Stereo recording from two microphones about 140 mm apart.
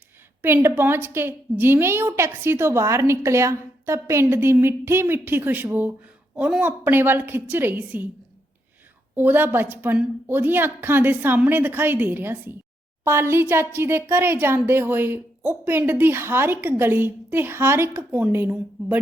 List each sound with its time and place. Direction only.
0.4 s a woman's voice: 15° right (ahead or behind)
9.1 s a woman's voice: 15° right (ahead or behind)